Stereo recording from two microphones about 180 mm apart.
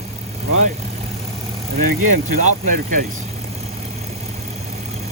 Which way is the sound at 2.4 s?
45° right (ahead or behind).